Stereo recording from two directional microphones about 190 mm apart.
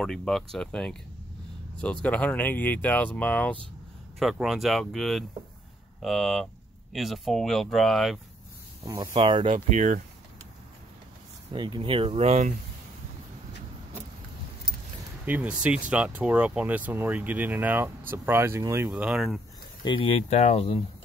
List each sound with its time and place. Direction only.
0.0 s speech: centre (ahead or behind)
8.8 s speech: 20° right (ahead or behind); by 10.0 s 40° right (ahead or behind)
11.5 s speech: 25° right (ahead or behind)
15.2 s speech: 5° right (ahead or behind)
19.8 s speech: 25° left (ahead or behind)